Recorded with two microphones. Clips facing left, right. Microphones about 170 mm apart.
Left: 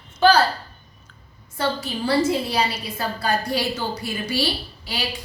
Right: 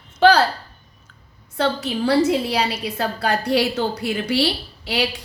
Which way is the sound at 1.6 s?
70° right (ahead or behind).